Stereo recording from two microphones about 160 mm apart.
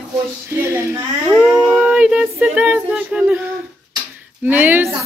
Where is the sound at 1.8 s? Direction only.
5° right (ahead or behind).